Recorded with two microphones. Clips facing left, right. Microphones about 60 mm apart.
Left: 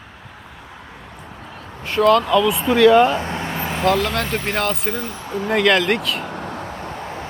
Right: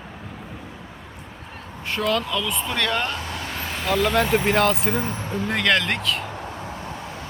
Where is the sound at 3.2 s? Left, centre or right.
Left.